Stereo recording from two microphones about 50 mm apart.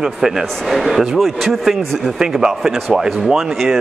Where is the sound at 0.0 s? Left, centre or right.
Centre.